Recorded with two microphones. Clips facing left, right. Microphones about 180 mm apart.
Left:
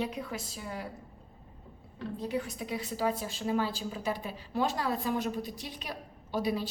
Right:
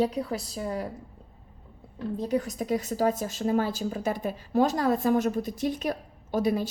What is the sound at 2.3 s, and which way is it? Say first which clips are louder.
Speech: right 8 dB; 40° right (ahead or behind).